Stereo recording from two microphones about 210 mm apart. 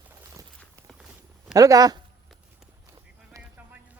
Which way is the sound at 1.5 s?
15° right (ahead or behind).